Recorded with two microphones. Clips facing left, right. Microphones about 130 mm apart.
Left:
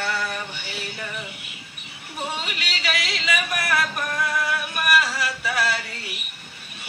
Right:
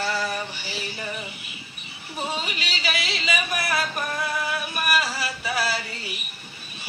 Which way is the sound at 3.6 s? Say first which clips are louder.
Left 2 dB; 30° right (ahead or behind).